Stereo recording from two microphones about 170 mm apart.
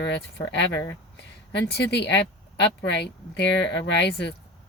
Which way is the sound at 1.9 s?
90° left.